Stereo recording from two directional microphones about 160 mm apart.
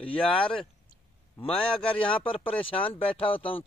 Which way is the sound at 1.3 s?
35° left (ahead or behind).